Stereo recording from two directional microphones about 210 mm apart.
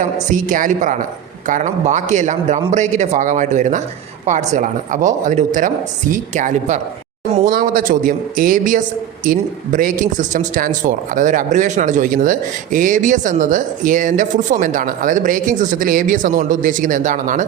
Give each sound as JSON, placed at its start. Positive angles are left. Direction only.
{"t": 0.3, "sound": "a man's voice", "side_deg": -40}